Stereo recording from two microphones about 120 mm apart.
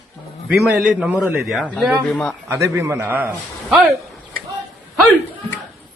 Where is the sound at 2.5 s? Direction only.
20° right (ahead or behind).